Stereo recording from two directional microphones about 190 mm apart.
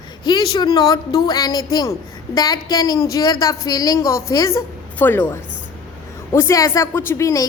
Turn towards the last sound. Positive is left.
turn(degrees=15)  # may be behind; listen again after turning